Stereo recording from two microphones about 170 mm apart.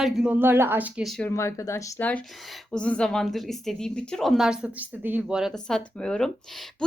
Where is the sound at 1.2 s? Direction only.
15° left (ahead or behind).